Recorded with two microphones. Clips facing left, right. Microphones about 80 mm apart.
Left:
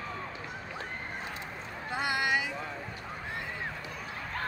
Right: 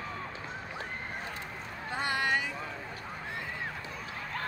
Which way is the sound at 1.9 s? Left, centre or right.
Centre.